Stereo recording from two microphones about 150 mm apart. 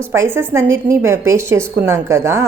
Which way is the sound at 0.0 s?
15° right (ahead or behind).